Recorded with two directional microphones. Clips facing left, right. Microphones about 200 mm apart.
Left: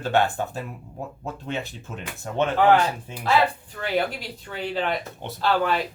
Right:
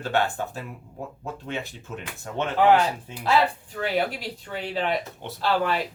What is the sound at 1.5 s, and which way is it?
Speech, 20° left (ahead or behind).